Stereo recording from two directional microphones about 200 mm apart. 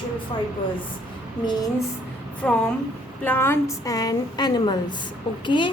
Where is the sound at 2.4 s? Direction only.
5° left (ahead or behind).